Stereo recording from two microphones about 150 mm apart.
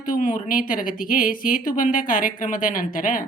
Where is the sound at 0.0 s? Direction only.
65° left (ahead or behind).